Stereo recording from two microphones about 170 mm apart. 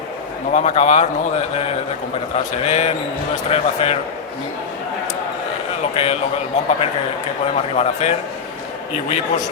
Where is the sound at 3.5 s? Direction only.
35° left (ahead or behind).